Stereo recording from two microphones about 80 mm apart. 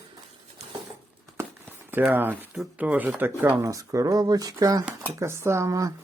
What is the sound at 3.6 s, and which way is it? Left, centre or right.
Speech, right.